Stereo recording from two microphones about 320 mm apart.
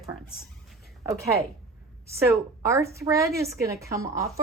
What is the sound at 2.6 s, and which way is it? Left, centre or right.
A woman's voice, centre.